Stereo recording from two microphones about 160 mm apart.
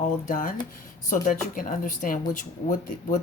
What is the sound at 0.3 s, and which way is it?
A woman's voice, 55° left (ahead or behind).